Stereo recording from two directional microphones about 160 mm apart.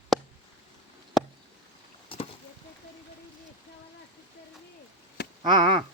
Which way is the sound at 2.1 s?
35° left (ahead or behind).